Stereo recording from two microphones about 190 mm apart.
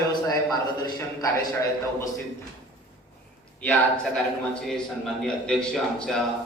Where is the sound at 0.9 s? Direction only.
20° left (ahead or behind).